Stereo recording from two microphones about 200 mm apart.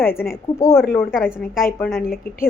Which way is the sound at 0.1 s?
50° left (ahead or behind).